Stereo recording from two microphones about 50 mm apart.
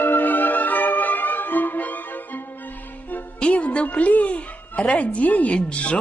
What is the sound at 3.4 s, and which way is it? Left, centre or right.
Music, left.